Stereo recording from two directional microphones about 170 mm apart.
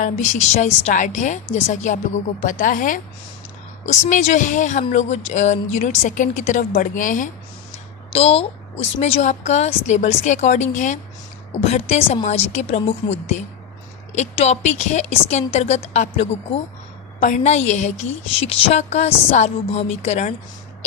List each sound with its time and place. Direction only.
0.0 s a woman's voice: 40° left (ahead or behind)
8.1 s a woman's voice: 35° left (ahead or behind)